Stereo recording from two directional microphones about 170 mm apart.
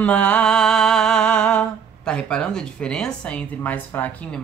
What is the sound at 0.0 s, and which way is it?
Music, 10° left (ahead or behind).